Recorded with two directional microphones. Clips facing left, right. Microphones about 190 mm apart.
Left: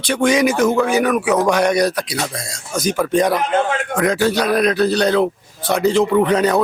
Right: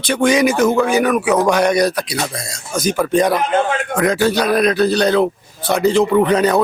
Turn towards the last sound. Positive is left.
turn(degrees=-5)  # may be behind; listen again after turning